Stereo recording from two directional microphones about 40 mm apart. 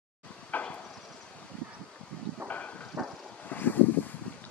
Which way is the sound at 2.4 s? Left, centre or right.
Left.